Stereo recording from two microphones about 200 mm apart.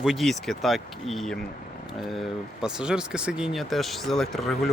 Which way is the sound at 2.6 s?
5° right (ahead or behind).